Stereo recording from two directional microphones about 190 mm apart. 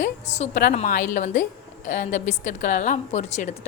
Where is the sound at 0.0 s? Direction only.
35° left (ahead or behind).